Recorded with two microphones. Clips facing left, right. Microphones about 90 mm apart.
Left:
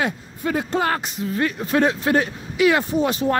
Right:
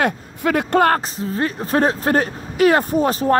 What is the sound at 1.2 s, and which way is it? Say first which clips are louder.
Speech: right 1 dB; 35° right (ahead or behind).